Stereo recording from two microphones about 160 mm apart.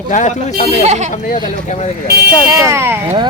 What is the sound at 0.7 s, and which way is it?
Speech, 45° right (ahead or behind).